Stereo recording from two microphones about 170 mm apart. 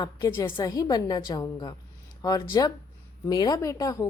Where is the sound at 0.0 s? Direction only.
15° left (ahead or behind).